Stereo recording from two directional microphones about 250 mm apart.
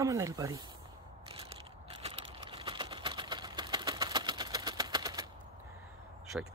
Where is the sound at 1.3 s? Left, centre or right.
Right.